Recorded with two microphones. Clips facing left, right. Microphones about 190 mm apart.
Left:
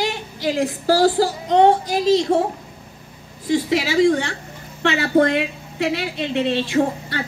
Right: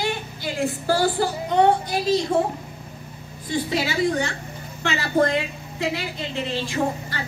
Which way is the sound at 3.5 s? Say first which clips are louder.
Left 5 dB; 85° left.